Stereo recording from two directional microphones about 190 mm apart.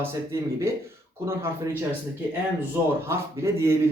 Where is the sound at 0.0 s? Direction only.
15° right (ahead or behind).